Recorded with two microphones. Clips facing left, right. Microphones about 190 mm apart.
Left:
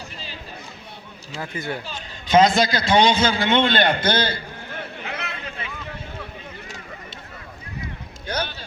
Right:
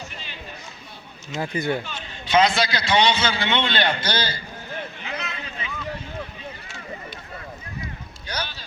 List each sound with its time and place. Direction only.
1.4 s speech: 15° right (ahead or behind)
1.9 s a man's voice: 40° left (ahead or behind)
5.0 s a sound: 60° left (ahead or behind)
8.3 s rowboat: 55° left (ahead or behind)